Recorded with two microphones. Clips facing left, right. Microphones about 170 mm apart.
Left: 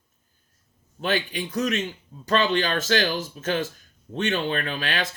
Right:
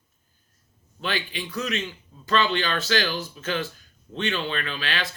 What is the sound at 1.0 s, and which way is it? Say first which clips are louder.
A man's voice: left 4 dB; 45° left (ahead or behind).